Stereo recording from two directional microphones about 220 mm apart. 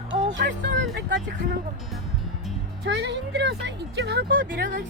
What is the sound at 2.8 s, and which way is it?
Speech, 50° right (ahead or behind).